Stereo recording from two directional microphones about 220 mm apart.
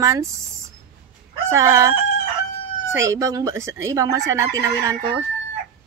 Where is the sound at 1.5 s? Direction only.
15° right (ahead or behind).